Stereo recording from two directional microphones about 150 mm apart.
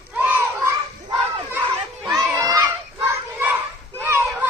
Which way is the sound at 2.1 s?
25° right (ahead or behind).